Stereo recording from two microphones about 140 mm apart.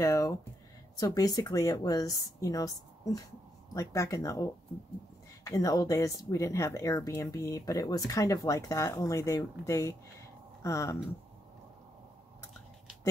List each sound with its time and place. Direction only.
0.0 s speech: 20° left (ahead or behind)